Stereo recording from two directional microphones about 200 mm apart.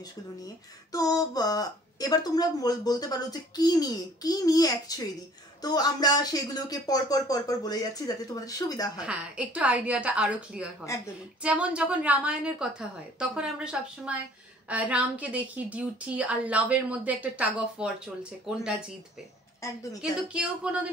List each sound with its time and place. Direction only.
0.9 s speech: 20° left (ahead or behind)
9.0 s a woman's voice: 5° right (ahead or behind)
19.6 s a woman's voice: 15° left (ahead or behind)
20.0 s a woman's voice: 5° right (ahead or behind)